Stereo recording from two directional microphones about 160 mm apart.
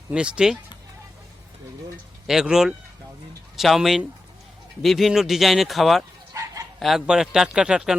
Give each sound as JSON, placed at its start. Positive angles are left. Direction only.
{"t": 0.1, "sound": "speech", "side_deg": -5}
{"t": 2.2, "sound": "speech", "side_deg": -5}
{"t": 6.3, "sound": "bow-wow", "side_deg": -20}
{"t": 6.7, "sound": "speech", "side_deg": 0}